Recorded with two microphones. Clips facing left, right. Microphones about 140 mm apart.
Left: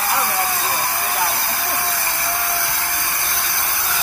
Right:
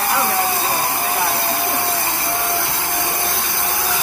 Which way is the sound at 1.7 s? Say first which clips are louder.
Right 3 dB; 20° right (ahead or behind).